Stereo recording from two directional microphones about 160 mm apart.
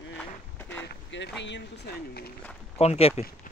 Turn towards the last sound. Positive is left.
turn(degrees=40)  # may be behind; listen again after turning